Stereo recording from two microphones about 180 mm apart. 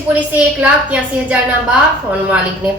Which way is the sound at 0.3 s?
5° right (ahead or behind).